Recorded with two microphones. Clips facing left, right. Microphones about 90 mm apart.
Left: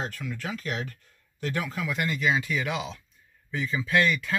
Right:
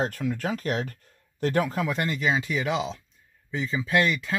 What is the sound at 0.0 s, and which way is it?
A man's voice, 45° right (ahead or behind).